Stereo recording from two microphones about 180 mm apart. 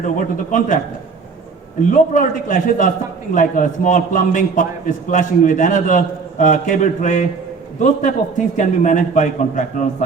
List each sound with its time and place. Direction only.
0.0 s a man's voice: 45° left (ahead or behind)
1.9 s a man's voice: 45° left (ahead or behind)